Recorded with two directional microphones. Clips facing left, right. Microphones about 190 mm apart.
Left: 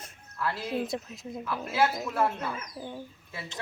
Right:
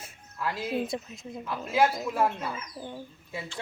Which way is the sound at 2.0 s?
10° right (ahead or behind).